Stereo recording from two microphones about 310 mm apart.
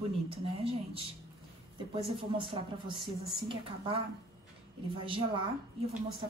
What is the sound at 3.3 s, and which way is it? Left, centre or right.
Speech, centre.